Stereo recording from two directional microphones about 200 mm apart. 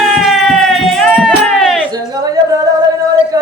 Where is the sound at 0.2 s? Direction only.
Centre (ahead or behind).